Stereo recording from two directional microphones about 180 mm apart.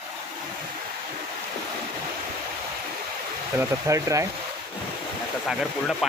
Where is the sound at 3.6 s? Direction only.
15° right (ahead or behind).